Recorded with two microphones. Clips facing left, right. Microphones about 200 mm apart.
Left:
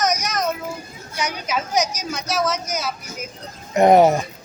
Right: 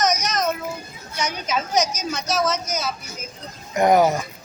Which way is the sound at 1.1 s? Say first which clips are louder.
Even; 10° left (ahead or behind).